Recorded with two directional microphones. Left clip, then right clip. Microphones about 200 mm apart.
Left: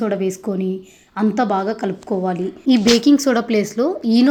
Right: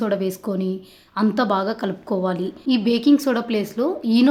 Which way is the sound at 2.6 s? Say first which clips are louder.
Left 5 dB; 20° left (ahead or behind).